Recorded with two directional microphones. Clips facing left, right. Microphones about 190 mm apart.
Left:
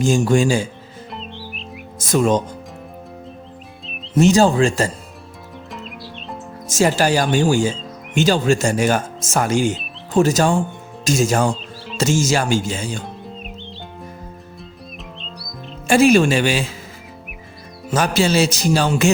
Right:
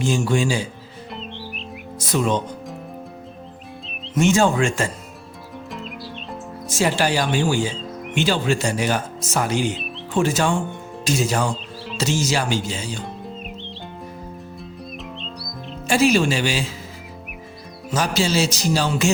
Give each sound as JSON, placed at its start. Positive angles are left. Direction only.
{"t": 0.0, "sound": "speech", "side_deg": 45}
{"t": 1.1, "sound": "music", "side_deg": 0}
{"t": 2.0, "sound": "speech", "side_deg": 45}
{"t": 4.1, "sound": "speech", "side_deg": 35}
{"t": 5.7, "sound": "music", "side_deg": 0}
{"t": 6.7, "sound": "speech", "side_deg": 45}
{"t": 13.2, "sound": "music", "side_deg": 0}
{"t": 15.9, "sound": "speech", "side_deg": 55}
{"t": 17.9, "sound": "music", "side_deg": 55}